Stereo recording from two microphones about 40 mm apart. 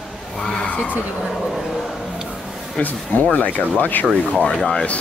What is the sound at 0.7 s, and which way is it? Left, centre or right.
Speech, left.